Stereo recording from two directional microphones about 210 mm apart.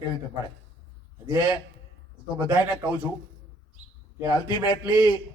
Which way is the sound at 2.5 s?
10° right (ahead or behind).